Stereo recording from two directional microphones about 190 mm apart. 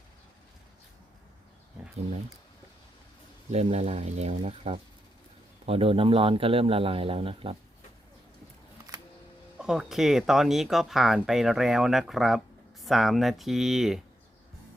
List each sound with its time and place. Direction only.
3.5 s speech: 35° right (ahead or behind)
9.6 s speech: 5° right (ahead or behind)